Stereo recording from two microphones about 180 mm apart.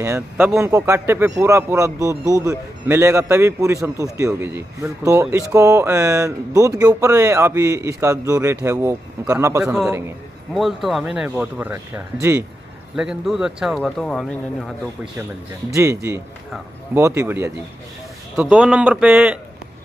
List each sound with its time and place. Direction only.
0.0 s a man's voice: 15° right (ahead or behind)
10.5 s speech: centre (ahead or behind)
15.7 s a man's voice: 15° right (ahead or behind)